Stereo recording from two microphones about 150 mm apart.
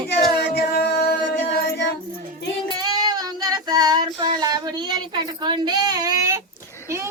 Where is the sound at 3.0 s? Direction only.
25° right (ahead or behind).